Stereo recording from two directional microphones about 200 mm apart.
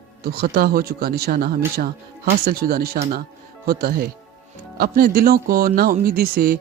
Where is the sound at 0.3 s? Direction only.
50° right (ahead or behind).